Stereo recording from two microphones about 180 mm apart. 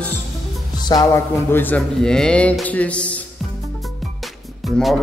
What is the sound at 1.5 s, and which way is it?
A man's voice, 10° left (ahead or behind).